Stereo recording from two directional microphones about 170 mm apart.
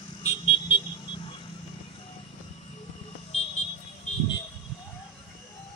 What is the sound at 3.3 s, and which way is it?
Vehicle, 40° left (ahead or behind).